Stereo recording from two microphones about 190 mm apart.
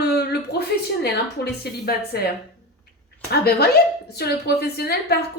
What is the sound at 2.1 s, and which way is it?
Speech, 55° left (ahead or behind).